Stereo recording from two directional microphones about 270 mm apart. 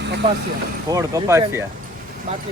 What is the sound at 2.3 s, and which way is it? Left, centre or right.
Speech, right.